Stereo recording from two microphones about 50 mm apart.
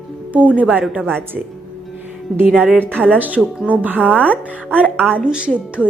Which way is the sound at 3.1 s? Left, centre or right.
Right.